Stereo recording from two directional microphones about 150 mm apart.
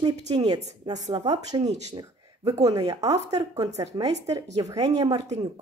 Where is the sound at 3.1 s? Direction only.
25° right (ahead or behind).